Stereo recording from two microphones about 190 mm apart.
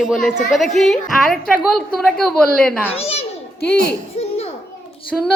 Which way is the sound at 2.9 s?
30° left (ahead or behind).